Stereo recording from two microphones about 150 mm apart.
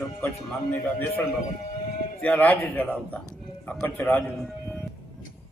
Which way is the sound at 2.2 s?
10° left (ahead or behind).